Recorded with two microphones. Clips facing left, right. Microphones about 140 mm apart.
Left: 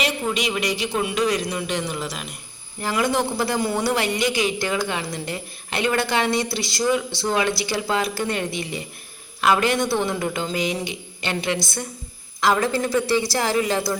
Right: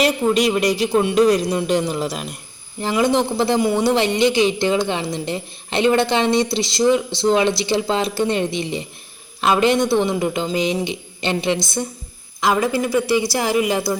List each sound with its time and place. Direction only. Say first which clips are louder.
0.0 s speech: right 7 dB; 40° right (ahead or behind)
2.8 s speech: right 4 dB; 20° right (ahead or behind)